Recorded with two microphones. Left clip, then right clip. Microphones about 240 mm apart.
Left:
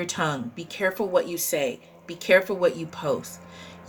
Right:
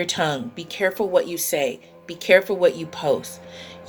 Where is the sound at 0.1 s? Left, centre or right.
Centre.